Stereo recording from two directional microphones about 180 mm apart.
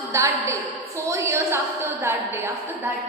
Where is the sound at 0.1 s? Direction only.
15° right (ahead or behind).